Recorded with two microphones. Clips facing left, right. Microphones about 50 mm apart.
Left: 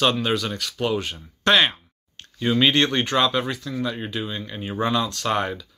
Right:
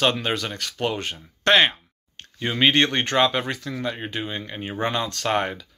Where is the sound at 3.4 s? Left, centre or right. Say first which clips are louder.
Left 1 dB; right.